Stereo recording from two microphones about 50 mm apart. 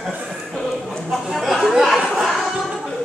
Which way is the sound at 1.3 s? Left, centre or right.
Centre.